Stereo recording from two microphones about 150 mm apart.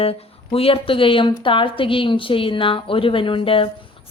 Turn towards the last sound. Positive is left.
turn(degrees=35)  # may be behind; listen again after turning